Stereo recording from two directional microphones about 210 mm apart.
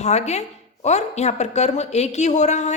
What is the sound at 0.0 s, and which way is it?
A woman's voice, 30° left (ahead or behind).